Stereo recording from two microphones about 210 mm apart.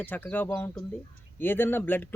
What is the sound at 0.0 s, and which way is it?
Speech, 10° left (ahead or behind).